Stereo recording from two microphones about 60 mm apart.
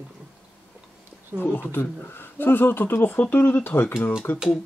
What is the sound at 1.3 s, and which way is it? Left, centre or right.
Speech, left.